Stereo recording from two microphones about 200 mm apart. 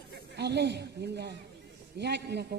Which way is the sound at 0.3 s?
55° right (ahead or behind).